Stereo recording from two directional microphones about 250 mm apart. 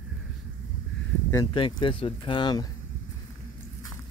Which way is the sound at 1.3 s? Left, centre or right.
Centre.